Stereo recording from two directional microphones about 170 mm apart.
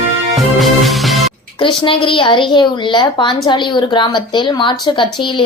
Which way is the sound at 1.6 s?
30° left (ahead or behind).